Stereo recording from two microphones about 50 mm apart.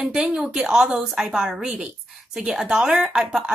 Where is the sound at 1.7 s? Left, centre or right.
Right.